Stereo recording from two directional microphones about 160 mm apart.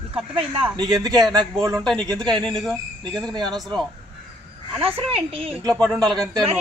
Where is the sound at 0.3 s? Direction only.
35° right (ahead or behind).